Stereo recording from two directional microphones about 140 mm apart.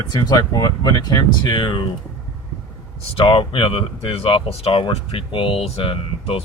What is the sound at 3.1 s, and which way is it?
Speech, 35° left (ahead or behind).